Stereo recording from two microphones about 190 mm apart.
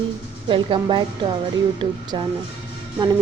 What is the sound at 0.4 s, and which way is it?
A woman's voice, 25° right (ahead or behind).